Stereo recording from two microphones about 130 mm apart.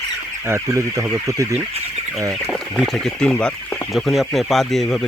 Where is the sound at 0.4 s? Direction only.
20° right (ahead or behind).